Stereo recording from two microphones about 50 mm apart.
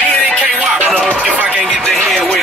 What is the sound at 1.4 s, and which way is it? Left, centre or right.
Speech, right.